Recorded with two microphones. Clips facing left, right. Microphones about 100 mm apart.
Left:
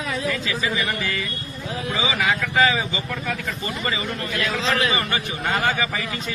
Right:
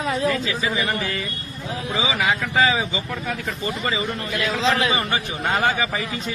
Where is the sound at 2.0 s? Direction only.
20° right (ahead or behind).